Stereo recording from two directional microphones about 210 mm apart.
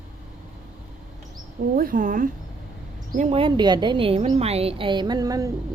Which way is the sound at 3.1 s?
25° right (ahead or behind).